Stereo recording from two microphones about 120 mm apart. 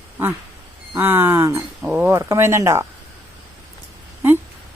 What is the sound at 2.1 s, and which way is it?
Speech, 25° right (ahead or behind).